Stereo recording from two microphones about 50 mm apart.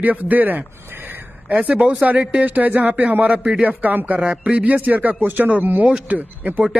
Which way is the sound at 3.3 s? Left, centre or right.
Right.